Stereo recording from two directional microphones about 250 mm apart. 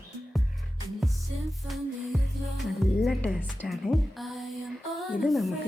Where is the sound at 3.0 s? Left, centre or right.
Centre.